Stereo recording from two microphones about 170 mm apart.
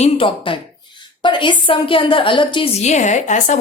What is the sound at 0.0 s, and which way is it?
A woman's voice, 30° left (ahead or behind).